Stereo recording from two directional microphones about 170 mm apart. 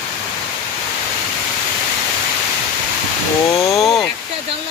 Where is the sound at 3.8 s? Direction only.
Centre (ahead or behind).